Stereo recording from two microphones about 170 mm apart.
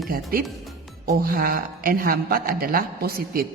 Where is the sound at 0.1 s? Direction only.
60° right (ahead or behind).